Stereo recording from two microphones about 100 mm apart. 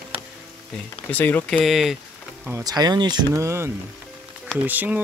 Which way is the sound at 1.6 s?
Centre (ahead or behind).